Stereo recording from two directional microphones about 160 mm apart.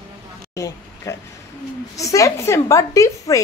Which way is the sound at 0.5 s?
20° left (ahead or behind).